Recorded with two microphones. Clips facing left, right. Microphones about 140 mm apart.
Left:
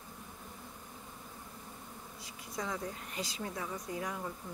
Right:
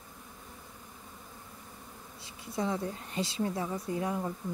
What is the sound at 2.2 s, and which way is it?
Speech, 30° right (ahead or behind).